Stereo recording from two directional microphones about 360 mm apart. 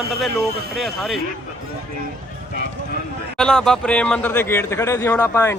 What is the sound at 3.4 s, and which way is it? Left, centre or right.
Speech, centre.